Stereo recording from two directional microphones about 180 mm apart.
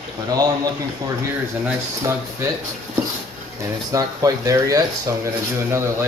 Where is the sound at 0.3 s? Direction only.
20° right (ahead or behind).